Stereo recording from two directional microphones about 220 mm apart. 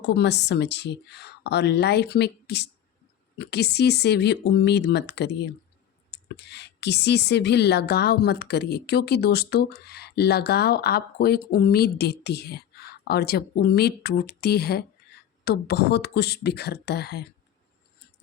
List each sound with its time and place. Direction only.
0.1 s a woman's voice: 50° left (ahead or behind)